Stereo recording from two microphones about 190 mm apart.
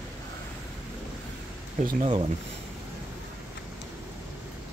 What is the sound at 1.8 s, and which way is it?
Speech, 30° right (ahead or behind).